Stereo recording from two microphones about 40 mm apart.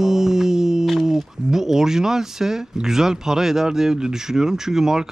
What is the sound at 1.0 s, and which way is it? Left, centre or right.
A man's voice, centre.